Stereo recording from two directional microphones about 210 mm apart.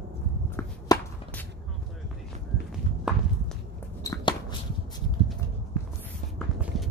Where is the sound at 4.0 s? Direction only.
20° left (ahead or behind).